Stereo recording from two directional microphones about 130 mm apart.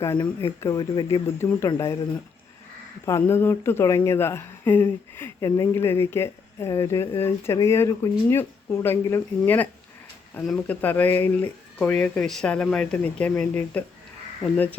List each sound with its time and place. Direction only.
0.4 s speech: 25° left (ahead or behind)
3.1 s speech: 20° left (ahead or behind)
10.4 s speech: centre (ahead or behind)
10.8 s speech: 15° left (ahead or behind)